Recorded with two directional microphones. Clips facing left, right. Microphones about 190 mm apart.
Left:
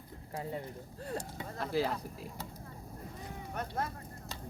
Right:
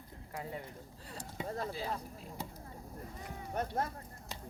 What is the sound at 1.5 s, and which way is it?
Speech, 80° left.